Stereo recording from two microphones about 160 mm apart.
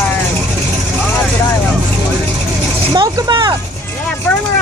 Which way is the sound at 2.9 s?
25° right (ahead or behind).